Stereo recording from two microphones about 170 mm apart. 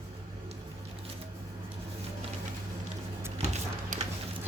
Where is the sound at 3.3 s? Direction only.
40° right (ahead or behind).